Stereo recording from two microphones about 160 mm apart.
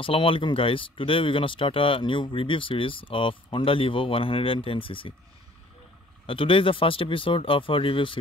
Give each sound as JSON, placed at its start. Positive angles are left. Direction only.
{"t": 0.0, "sound": "speech", "side_deg": 35}
{"t": 6.2, "sound": "speech", "side_deg": 35}